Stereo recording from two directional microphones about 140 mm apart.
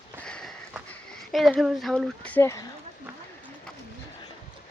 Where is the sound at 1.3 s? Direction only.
Centre (ahead or behind).